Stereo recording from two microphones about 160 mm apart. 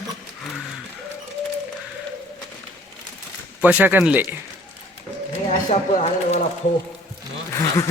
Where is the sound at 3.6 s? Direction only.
10° right (ahead or behind).